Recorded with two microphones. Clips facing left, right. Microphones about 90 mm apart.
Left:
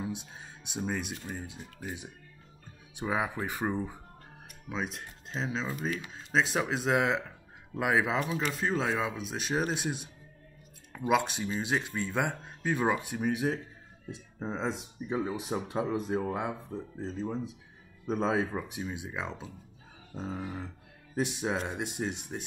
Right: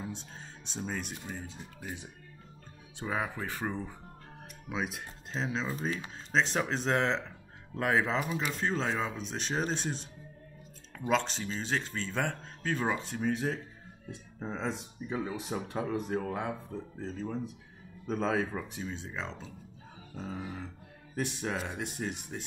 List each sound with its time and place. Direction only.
0.0 s speech: 15° left (ahead or behind)
4.6 s speech: 5° right (ahead or behind)
5.9 s speech: 30° right (ahead or behind)
6.3 s speech: 5° left (ahead or behind)
8.2 s speech: 5° right (ahead or behind); by 22.4 s 20° left (ahead or behind)